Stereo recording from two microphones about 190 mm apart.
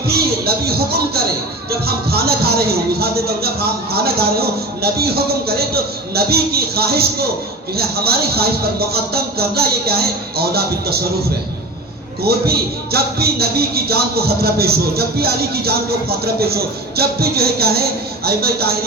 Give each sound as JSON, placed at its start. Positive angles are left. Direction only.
{"t": 0.1, "sound": "a man's voice", "side_deg": -55}
{"t": 12.2, "sound": "a man's voice", "side_deg": -55}